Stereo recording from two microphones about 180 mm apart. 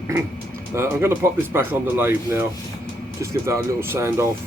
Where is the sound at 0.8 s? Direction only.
15° right (ahead or behind).